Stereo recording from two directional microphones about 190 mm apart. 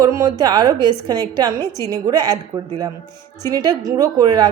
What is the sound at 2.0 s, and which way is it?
A woman's voice, 20° right (ahead or behind).